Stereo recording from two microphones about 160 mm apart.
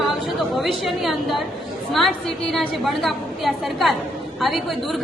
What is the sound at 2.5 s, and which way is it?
A woman's voice, centre (ahead or behind).